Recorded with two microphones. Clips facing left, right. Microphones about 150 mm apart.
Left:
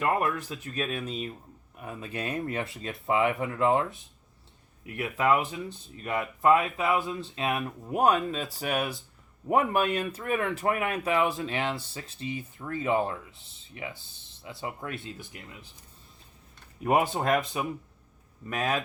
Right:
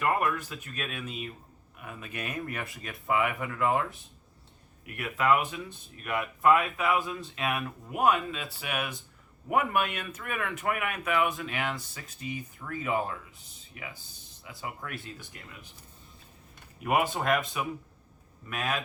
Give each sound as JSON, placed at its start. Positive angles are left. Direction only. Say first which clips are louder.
{"t": 0.8, "sound": "speech", "louder": "left 5 dB", "side_deg": 35}
{"t": 4.9, "sound": "speech", "louder": "left 1 dB", "side_deg": 25}
{"t": 7.9, "sound": "speech", "louder": "left 2 dB", "side_deg": 35}
{"t": 16.8, "sound": "speech", "louder": "left 2 dB", "side_deg": 30}